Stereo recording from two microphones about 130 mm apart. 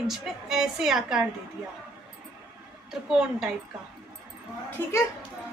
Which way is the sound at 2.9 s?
5° right (ahead or behind).